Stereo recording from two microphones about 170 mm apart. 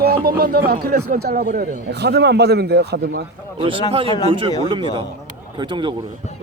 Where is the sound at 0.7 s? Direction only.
65° right (ahead or behind); by 1.6 s 50° right (ahead or behind).